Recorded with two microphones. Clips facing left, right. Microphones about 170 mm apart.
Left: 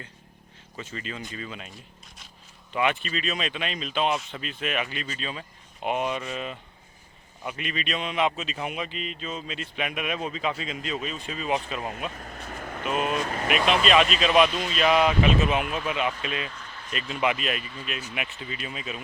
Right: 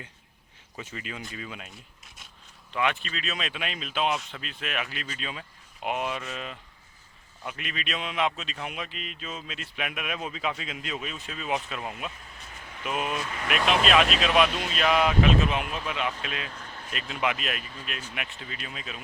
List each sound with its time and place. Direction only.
0.8 s speech: 10° right (ahead or behind)
2.7 s speech: centre (ahead or behind)
12.1 s speech: 55° left (ahead or behind)
13.5 s speech: centre (ahead or behind)
16.6 s a sound: 45° right (ahead or behind)
16.9 s speech: centre (ahead or behind)